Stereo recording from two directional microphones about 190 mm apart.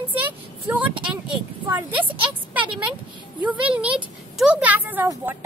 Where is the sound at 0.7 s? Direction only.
10° right (ahead or behind).